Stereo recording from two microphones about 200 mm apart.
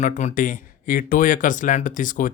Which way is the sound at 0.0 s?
35° left (ahead or behind).